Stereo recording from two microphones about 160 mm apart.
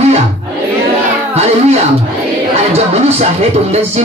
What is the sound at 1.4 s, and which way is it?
Music, 40° right (ahead or behind).